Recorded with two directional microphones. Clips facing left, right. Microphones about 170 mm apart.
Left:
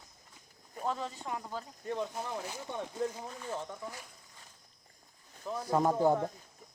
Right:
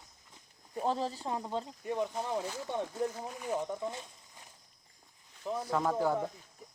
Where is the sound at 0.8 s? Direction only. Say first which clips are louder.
Right 3 dB; 30° right (ahead or behind).